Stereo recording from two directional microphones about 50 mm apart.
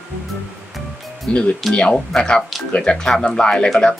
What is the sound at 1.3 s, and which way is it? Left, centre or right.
Speech, left.